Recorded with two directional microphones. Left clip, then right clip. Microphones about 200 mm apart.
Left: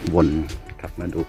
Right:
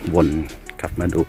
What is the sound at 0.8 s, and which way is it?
Speech, 15° right (ahead or behind).